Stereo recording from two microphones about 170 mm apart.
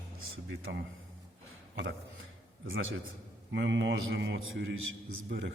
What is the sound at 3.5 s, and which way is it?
A man's voice, 90° right.